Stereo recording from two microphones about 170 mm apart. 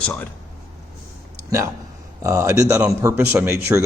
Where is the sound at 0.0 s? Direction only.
5° left (ahead or behind).